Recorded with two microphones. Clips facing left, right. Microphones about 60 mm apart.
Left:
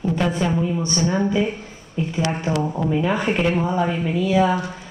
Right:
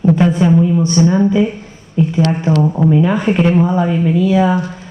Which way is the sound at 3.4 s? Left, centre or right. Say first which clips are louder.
Right 7 dB; centre.